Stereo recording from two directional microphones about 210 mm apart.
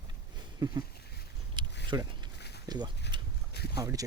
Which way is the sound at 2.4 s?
50° left (ahead or behind).